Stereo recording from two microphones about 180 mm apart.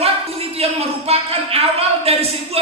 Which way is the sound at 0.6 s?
35° right (ahead or behind).